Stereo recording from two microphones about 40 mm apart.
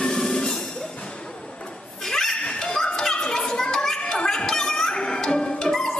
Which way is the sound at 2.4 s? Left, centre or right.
Left.